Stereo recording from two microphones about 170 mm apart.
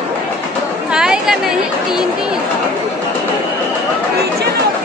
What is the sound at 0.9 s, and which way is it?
Chatter, 5° right (ahead or behind).